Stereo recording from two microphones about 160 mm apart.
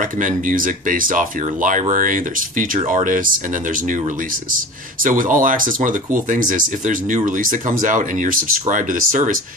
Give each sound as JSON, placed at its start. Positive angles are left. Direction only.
{"t": 0.2, "sound": "speech", "side_deg": -55}
{"t": 5.0, "sound": "speech", "side_deg": -55}